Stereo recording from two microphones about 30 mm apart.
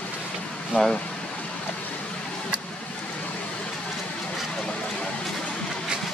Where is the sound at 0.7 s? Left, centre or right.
Left.